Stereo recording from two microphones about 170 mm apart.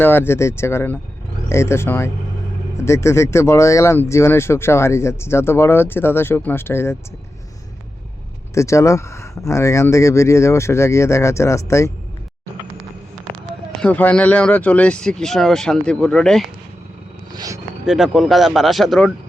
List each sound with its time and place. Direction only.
0.0 s speech: 10° left (ahead or behind)
8.5 s speech: 15° left (ahead or behind)
13.8 s speech: 10° left (ahead or behind)
17.3 s speech: 20° right (ahead or behind)
17.8 s speech: centre (ahead or behind)